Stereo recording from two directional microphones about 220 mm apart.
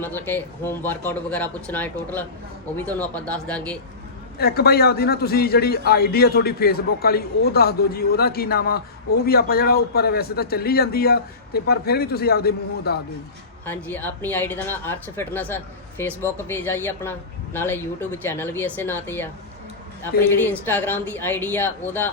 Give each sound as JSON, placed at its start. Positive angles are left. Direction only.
{"t": 0.0, "sound": "speech", "side_deg": 10}
{"t": 4.4, "sound": "a man's voice", "side_deg": 45}
{"t": 13.7, "sound": "speech", "side_deg": 10}
{"t": 20.4, "sound": "speech", "side_deg": 10}